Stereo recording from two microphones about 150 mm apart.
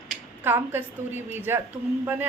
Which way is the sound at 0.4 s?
15° right (ahead or behind).